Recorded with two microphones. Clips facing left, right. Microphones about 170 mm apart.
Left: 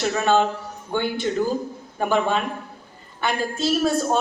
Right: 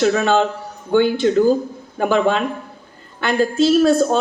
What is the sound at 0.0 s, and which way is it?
A woman's voice, 90° right.